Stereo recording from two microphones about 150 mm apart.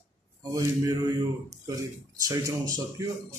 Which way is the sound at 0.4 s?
25° right (ahead or behind).